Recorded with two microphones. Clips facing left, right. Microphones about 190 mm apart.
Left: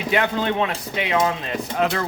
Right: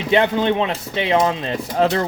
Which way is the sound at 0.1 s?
25° right (ahead or behind).